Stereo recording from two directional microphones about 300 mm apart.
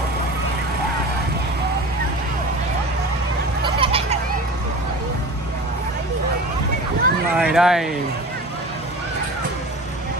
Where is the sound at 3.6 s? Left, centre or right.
Centre.